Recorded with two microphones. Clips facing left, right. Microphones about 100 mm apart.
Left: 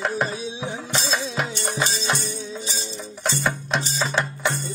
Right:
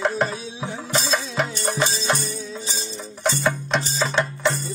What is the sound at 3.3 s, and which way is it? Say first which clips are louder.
Music: right 3 dB; centre (ahead or behind).